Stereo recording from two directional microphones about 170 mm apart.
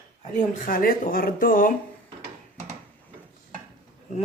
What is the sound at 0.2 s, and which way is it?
Speech, 50° left (ahead or behind).